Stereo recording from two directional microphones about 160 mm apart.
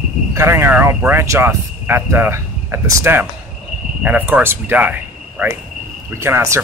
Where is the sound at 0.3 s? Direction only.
15° right (ahead or behind).